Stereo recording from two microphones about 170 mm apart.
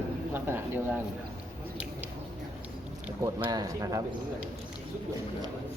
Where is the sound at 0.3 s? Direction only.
15° right (ahead or behind).